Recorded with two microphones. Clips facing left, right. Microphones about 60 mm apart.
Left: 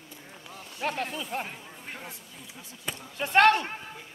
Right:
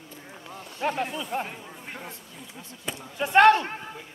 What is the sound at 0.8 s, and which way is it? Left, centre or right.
Speech, centre.